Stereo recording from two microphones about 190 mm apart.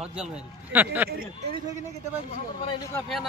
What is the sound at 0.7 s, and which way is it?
Speech, 10° right (ahead or behind).